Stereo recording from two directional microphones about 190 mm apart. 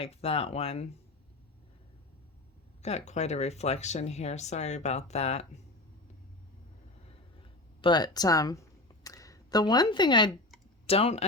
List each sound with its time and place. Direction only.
0.0 s speech: 30° left (ahead or behind)
3.1 s speech: 35° left (ahead or behind)
7.8 s speech: 25° left (ahead or behind)